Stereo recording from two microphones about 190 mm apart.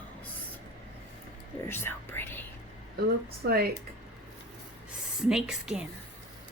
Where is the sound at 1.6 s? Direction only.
10° left (ahead or behind).